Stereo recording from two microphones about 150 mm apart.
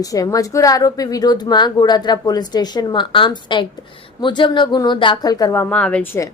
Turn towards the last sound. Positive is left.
turn(degrees=5)  # may be behind; listen again after turning